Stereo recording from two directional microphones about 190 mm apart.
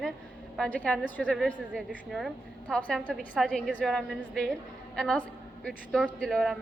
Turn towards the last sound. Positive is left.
turn(degrees=0)  # may be behind; listen again after turning